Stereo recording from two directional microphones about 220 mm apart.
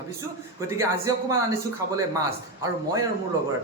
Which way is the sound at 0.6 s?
15° right (ahead or behind).